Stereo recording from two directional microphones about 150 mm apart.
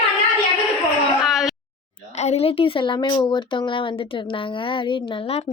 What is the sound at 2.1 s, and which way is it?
Speech, 45° left (ahead or behind).